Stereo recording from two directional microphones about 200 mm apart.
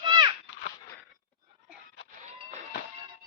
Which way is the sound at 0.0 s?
25° right (ahead or behind).